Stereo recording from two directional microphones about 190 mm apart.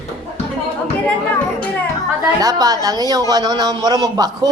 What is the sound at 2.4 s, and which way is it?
A woman's voice, 20° right (ahead or behind).